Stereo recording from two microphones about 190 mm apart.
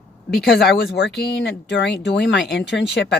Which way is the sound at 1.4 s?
65° left (ahead or behind).